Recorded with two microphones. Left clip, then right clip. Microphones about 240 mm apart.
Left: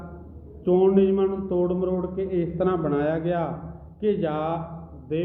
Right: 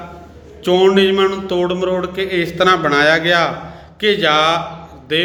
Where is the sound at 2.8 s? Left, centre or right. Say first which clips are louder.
Right 12 dB; centre.